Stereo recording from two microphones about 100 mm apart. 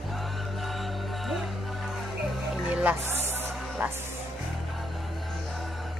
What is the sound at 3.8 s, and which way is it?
Speech, 15° right (ahead or behind).